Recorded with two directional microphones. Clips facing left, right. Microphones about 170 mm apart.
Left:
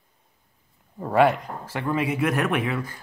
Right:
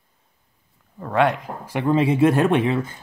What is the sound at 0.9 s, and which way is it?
Speech, 15° left (ahead or behind).